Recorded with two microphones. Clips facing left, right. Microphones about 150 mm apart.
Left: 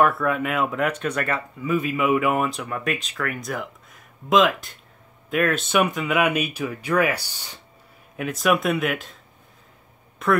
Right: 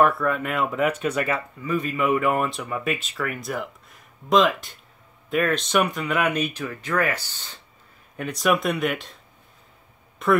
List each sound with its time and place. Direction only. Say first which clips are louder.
0.0 s speech: even; centre (ahead or behind)
8.2 s speech: left 1 dB; centre (ahead or behind)
10.2 s speech: right 1 dB; centre (ahead or behind)